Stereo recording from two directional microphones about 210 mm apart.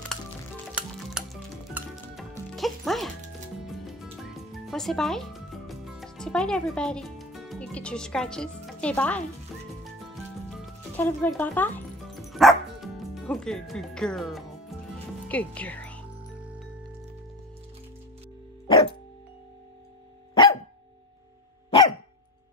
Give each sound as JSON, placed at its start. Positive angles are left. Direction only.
{"t": 0.7, "sound": "music", "side_deg": -5}
{"t": 15.2, "sound": "speech", "side_deg": 5}
{"t": 18.7, "sound": "music", "side_deg": 25}
{"t": 21.6, "sound": "dog", "side_deg": 20}